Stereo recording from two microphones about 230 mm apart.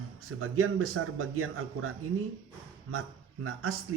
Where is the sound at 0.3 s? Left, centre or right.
Right.